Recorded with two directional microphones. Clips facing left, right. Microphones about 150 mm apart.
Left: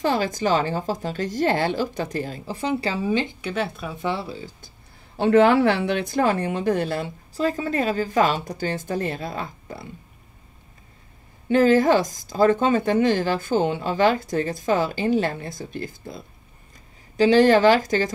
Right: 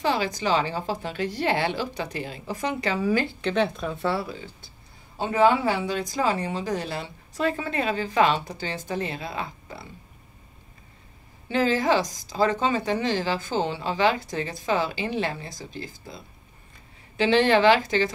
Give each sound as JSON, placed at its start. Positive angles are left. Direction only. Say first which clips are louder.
{"t": 0.0, "sound": "speech", "louder": "left 3 dB", "side_deg": 45}
{"t": 3.3, "sound": "speech", "louder": "right 3 dB", "side_deg": 10}
{"t": 4.1, "sound": "speech", "louder": "even", "side_deg": 30}
{"t": 5.1, "sound": "speech", "louder": "left 5 dB", "side_deg": 75}
{"t": 7.3, "sound": "speech", "louder": "left 3 dB", "side_deg": 35}
{"t": 11.4, "sound": "speech", "louder": "left 6 dB", "side_deg": 50}
{"t": 17.2, "sound": "speech", "louder": "left 4 dB", "side_deg": 40}